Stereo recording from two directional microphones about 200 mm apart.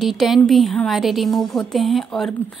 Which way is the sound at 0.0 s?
Centre (ahead or behind).